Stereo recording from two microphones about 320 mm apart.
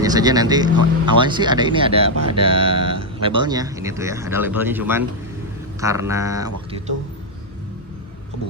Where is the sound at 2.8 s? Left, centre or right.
Right.